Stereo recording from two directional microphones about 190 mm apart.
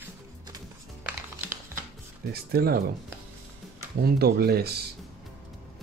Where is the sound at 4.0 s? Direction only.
55° right (ahead or behind).